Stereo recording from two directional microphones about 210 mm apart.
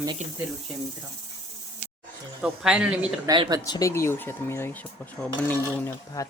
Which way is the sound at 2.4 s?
5° right (ahead or behind).